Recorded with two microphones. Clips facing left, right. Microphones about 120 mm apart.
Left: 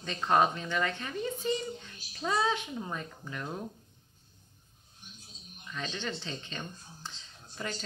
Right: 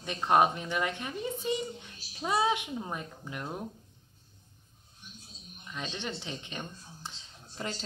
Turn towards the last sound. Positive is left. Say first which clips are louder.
# right 1 dB
turn(degrees=-30)  # may be behind; listen again after turning